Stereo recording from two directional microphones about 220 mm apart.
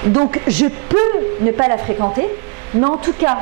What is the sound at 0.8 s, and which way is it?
A woman's voice, 20° right (ahead or behind).